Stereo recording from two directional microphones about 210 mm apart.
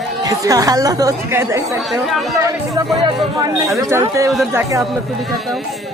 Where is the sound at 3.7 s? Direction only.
15° right (ahead or behind).